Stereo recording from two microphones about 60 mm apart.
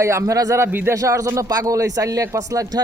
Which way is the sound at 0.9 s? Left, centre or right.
Right.